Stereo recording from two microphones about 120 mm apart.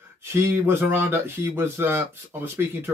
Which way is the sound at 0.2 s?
20° right (ahead or behind).